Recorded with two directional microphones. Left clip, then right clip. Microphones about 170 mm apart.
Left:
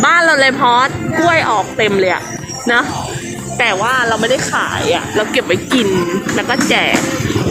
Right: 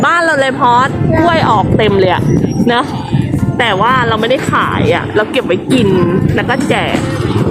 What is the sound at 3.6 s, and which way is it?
Speech, 20° right (ahead or behind).